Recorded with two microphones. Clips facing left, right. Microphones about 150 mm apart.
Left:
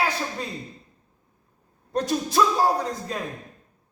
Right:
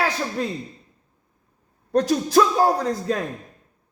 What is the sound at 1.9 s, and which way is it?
A man's voice, 75° right (ahead or behind).